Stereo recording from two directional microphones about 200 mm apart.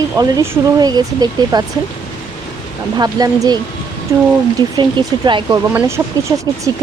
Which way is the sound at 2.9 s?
20° right (ahead or behind).